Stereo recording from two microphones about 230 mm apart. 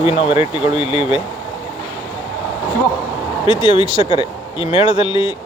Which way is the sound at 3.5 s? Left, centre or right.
Centre.